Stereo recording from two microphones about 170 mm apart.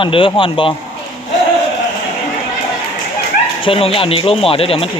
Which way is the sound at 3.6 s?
30° left (ahead or behind).